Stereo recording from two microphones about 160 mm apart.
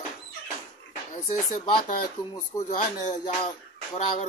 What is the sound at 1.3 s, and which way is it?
Speech, 55° left (ahead or behind).